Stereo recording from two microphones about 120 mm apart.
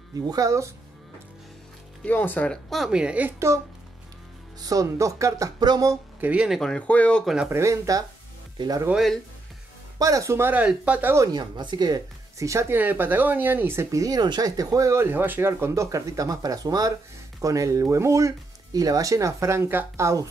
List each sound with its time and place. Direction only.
0.3 s speech: 25° right (ahead or behind)
2.0 s speech: 15° left (ahead or behind); by 5.9 s 30° right (ahead or behind)
6.2 s speech: 10° right (ahead or behind)
6.6 s speech: 10° left (ahead or behind)
7.4 s speech: 25° right (ahead or behind)
8.9 s speech: centre (ahead or behind)
9.9 s speech: 30° right (ahead or behind)
11.3 s speech: 40° right (ahead or behind)